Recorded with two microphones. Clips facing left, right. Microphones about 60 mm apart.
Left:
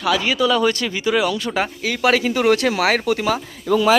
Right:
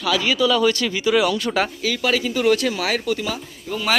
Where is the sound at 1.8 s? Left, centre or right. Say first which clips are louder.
Left 3 dB; left.